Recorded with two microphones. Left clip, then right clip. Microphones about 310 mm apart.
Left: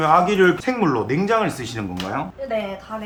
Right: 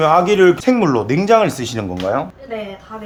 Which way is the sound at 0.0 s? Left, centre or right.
Right.